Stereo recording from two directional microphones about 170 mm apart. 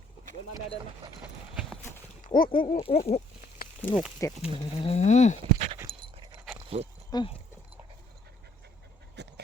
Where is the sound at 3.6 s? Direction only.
60° left (ahead or behind).